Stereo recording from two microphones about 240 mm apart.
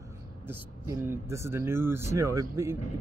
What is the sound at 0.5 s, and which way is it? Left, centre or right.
Speech, centre.